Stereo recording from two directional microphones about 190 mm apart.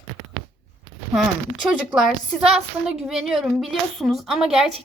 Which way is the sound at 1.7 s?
5° right (ahead or behind).